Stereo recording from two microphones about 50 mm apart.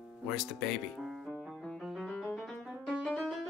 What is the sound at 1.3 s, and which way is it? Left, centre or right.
Music, centre.